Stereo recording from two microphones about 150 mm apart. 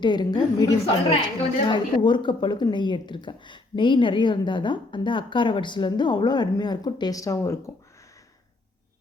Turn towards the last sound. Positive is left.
turn(degrees=20)  # may be behind; listen again after turning